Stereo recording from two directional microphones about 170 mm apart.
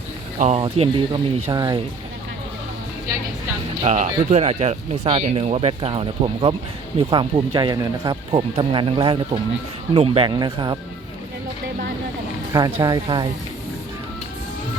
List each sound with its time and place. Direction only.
0.3 s speech: 45° right (ahead or behind)
0.6 s speech: 30° right (ahead or behind)
3.8 s speech: 45° right (ahead or behind)
10.2 s speech: 25° right (ahead or behind)
12.5 s speech: 20° right (ahead or behind)